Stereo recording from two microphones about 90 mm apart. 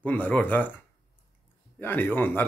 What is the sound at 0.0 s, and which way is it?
Speech, 15° left (ahead or behind).